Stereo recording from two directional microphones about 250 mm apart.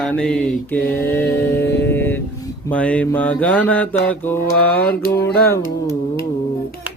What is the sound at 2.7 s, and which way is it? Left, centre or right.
Mantra, centre.